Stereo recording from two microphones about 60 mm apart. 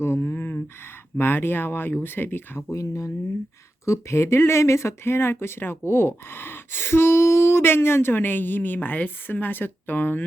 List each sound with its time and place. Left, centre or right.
0.0 s a sound: left
1.2 s speech: left
2.6 s speech: left
3.8 s speech: left